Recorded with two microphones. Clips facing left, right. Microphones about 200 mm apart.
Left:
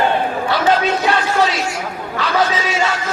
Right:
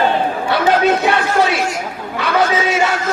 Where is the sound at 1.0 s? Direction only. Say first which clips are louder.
Right 1 dB; 60° right (ahead or behind).